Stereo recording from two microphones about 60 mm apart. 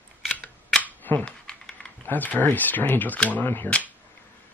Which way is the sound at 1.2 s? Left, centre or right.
Centre.